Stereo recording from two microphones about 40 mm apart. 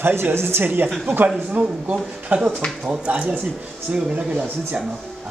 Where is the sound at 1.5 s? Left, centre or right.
Right.